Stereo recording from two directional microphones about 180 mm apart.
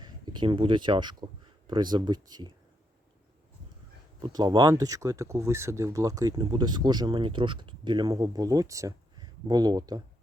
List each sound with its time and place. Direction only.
0.0 s speech: 25° right (ahead or behind)
4.2 s speech: 25° right (ahead or behind)